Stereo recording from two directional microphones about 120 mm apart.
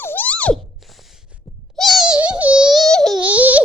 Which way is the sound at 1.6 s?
Centre (ahead or behind).